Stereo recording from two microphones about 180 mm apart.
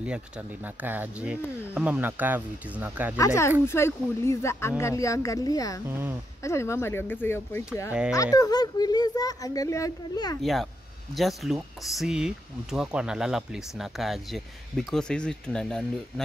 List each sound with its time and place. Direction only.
0.8 s speech: 10° right (ahead or behind)
3.2 s speech: 15° left (ahead or behind)
5.9 s speech: 10° right (ahead or behind)
6.4 s speech: 15° left (ahead or behind)
10.4 s speech: centre (ahead or behind)